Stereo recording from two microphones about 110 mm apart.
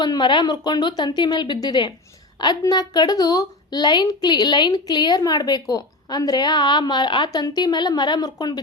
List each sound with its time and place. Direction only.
0.0 s a woman's voice: 45° left (ahead or behind)